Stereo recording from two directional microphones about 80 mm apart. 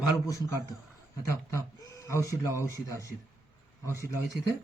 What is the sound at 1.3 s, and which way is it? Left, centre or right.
Speech, left.